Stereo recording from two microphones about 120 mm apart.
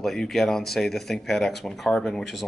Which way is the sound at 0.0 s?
Centre (ahead or behind).